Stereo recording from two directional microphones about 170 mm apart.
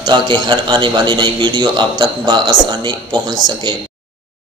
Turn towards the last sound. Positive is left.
turn(degrees=-25)  # may be behind; listen again after turning